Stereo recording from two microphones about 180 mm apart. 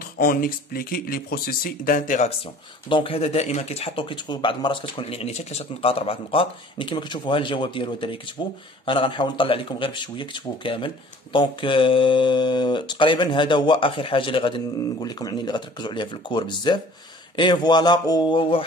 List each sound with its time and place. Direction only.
0.2 s speech: 55° left (ahead or behind)
2.9 s speech: 30° left (ahead or behind)